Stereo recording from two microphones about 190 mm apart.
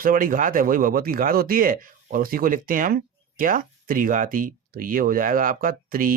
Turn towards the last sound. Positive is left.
turn(degrees=-50)  # may be behind; listen again after turning